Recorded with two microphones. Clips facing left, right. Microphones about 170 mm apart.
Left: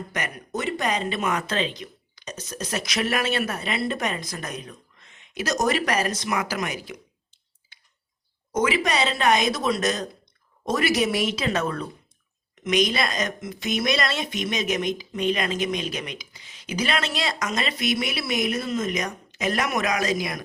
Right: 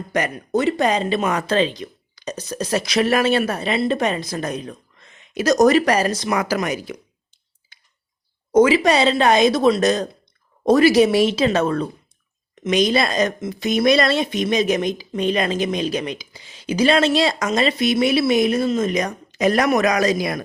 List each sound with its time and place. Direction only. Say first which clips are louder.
0.1 s speech: right 13 dB; 30° right (ahead or behind)
8.5 s speech: right 9 dB; 30° right (ahead or behind)